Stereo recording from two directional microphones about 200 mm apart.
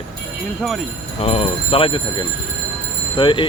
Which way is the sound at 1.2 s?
30° left (ahead or behind).